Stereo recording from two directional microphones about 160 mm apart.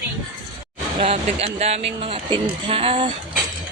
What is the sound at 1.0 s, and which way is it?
Speech, 40° right (ahead or behind).